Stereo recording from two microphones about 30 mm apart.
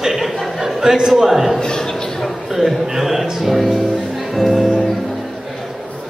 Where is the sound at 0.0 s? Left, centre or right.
Centre.